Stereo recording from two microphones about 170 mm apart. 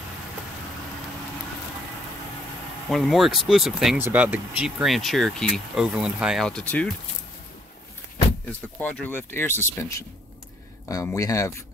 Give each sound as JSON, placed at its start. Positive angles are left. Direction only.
{"t": 2.9, "sound": "speech", "side_deg": 0}
{"t": 8.5, "sound": "speech", "side_deg": 5}